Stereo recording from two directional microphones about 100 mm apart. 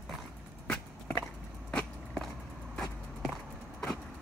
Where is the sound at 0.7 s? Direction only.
20° left (ahead or behind).